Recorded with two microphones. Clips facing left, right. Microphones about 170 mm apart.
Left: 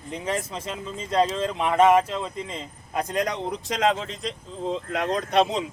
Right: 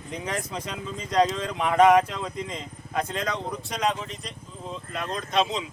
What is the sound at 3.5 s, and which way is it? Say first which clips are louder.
Speech: left 4 dB; 90° left.